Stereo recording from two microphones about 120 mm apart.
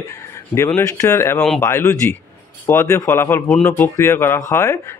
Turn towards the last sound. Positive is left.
turn(degrees=20)  # may be behind; listen again after turning